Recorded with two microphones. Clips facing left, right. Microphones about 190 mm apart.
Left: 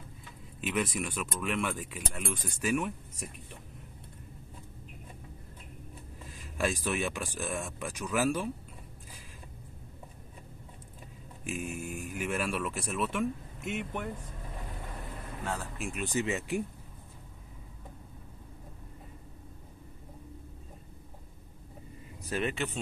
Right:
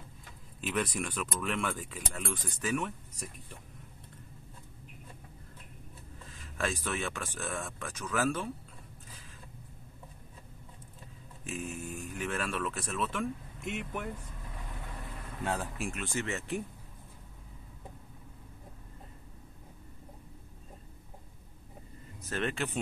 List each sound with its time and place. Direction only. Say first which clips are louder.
0.6 s speech: left 1 dB; 5° left (ahead or behind)
6.6 s speech: left 3 dB; 15° left (ahead or behind)
11.5 s speech: left 1 dB; 10° left (ahead or behind)
15.9 s speech: left 7 dB; 15° left (ahead or behind)
22.3 s speech: left 1 dB; 5° left (ahead or behind)